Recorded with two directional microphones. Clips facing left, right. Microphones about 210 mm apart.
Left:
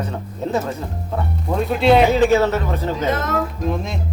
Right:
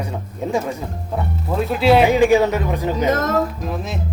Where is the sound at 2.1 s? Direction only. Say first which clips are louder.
Right 1 dB; 15° right (ahead or behind).